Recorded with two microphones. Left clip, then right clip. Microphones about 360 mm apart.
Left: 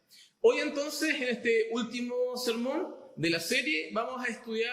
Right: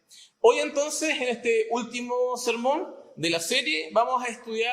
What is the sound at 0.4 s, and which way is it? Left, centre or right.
A man's voice, centre.